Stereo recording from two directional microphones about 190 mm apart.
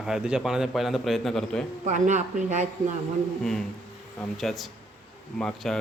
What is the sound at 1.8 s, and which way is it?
Speech, 40° right (ahead or behind).